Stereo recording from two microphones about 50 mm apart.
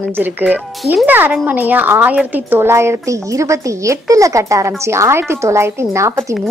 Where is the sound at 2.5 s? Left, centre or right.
Right.